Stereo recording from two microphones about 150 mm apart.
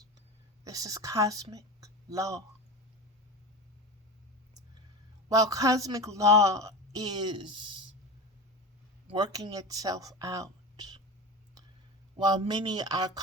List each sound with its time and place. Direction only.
0.6 s a woman's voice: 25° right (ahead or behind)
5.3 s a woman's voice: 25° right (ahead or behind)
9.1 s a woman's voice: 25° right (ahead or behind)
12.1 s a woman's voice: 30° right (ahead or behind)